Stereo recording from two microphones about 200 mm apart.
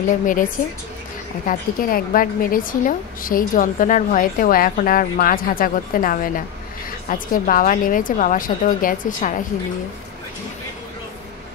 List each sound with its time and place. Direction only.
0.1 s a woman's voice: 40° left (ahead or behind)
1.5 s a woman's voice: 45° left (ahead or behind)